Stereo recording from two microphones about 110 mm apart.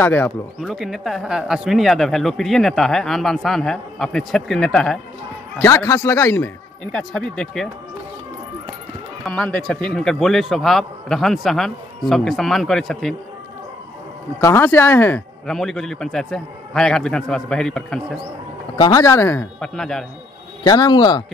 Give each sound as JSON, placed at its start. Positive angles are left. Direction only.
{"t": 0.0, "sound": "speech", "side_deg": 15}
{"t": 0.6, "sound": "speech", "side_deg": -5}
{"t": 5.6, "sound": "speech", "side_deg": 25}
{"t": 6.8, "sound": "speech", "side_deg": 5}
{"t": 9.2, "sound": "speech", "side_deg": 10}
{"t": 14.4, "sound": "speech", "side_deg": 20}
{"t": 15.4, "sound": "speech", "side_deg": 5}
{"t": 18.8, "sound": "speech", "side_deg": 30}
{"t": 19.6, "sound": "speech", "side_deg": 5}
{"t": 20.6, "sound": "speech", "side_deg": 35}